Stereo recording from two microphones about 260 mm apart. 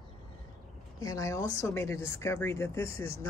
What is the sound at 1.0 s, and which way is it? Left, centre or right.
Speech, centre.